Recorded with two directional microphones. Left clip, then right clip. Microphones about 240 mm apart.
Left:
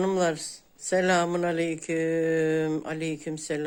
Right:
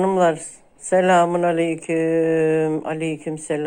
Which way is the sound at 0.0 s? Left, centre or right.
Centre.